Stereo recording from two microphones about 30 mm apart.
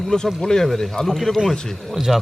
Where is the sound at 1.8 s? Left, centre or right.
Centre.